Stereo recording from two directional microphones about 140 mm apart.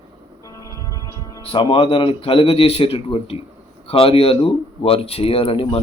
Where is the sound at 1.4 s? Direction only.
40° left (ahead or behind).